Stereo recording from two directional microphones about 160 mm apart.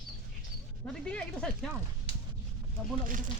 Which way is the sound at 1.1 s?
5° left (ahead or behind).